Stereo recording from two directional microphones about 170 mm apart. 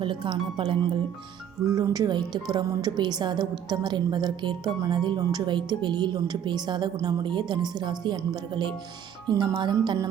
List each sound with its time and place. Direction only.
0.0 s speech: 30° right (ahead or behind)